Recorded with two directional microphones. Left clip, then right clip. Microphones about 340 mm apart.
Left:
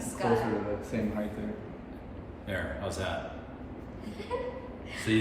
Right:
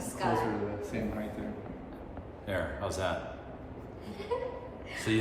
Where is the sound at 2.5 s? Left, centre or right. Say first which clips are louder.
Right 1 dB; centre.